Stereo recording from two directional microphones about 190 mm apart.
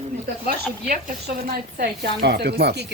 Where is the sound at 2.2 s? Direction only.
60° right (ahead or behind).